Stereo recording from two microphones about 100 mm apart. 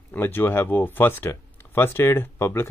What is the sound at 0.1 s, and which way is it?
Speech, 20° left (ahead or behind).